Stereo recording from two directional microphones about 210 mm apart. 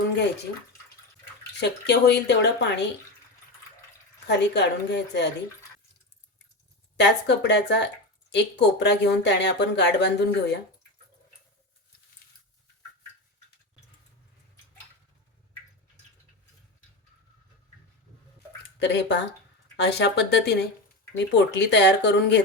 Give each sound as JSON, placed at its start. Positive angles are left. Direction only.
{"t": 1.5, "sound": "speech", "side_deg": 55}
{"t": 4.3, "sound": "speech", "side_deg": 55}
{"t": 6.9, "sound": "speech", "side_deg": 55}
{"t": 18.8, "sound": "speech", "side_deg": 55}